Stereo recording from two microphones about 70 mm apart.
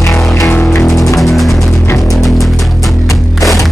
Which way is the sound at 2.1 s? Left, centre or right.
Centre.